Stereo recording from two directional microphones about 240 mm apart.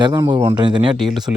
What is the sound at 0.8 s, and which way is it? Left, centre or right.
Speech, centre.